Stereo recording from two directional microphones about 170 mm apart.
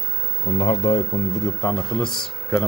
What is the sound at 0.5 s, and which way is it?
A man's voice, 30° left (ahead or behind).